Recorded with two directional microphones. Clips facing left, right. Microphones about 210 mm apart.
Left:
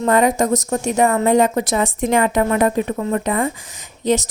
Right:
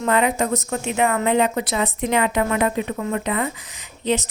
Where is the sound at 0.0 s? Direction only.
40° left (ahead or behind).